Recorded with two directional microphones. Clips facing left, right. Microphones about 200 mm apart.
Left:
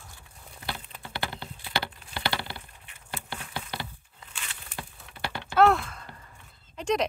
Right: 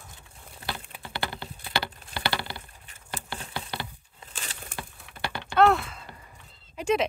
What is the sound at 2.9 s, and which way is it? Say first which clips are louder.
Patter: right 1 dB; 35° right (ahead or behind).